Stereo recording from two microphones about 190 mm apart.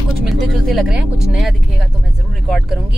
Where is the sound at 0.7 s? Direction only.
Centre (ahead or behind).